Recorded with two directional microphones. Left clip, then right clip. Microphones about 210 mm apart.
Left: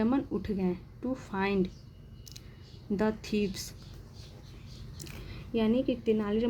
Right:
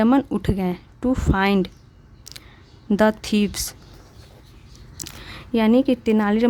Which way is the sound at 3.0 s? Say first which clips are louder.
Right 12 dB; 35° right (ahead or behind).